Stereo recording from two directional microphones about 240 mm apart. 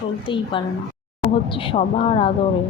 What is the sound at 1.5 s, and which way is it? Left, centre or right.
Speech, left.